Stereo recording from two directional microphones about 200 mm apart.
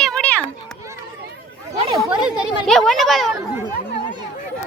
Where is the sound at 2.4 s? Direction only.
Centre (ahead or behind).